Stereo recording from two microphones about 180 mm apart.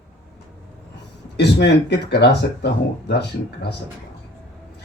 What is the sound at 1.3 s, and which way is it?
Speech, 70° left (ahead or behind).